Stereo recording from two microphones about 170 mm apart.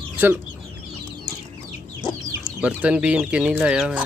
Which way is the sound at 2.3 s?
10° right (ahead or behind).